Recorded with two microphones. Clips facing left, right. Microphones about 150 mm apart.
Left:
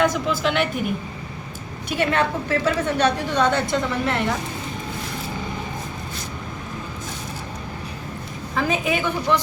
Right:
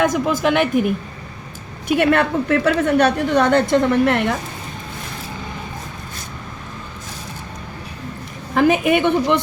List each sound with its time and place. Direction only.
0.0 s a woman's voice: 45° right (ahead or behind)
1.9 s a woman's voice: 55° right (ahead or behind)
8.5 s a woman's voice: 65° right (ahead or behind)